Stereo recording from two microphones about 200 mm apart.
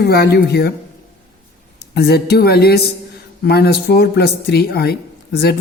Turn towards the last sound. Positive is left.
turn(degrees=50)  # may be behind; listen again after turning